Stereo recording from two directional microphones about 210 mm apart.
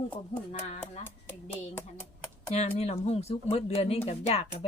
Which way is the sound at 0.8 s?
10° left (ahead or behind).